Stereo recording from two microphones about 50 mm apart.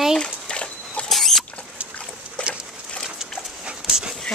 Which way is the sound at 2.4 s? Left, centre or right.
Left.